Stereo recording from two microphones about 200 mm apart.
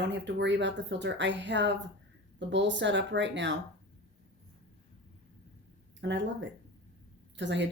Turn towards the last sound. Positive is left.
turn(degrees=-60)  # may be behind; listen again after turning